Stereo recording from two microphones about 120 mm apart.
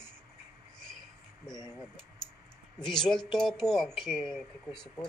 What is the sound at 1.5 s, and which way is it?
Speech, 35° left (ahead or behind).